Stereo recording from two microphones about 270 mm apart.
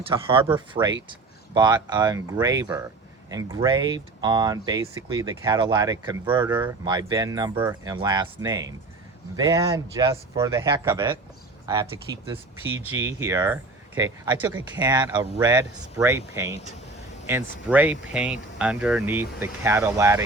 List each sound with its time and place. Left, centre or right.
0.0 s speech: centre
17.7 s speech: centre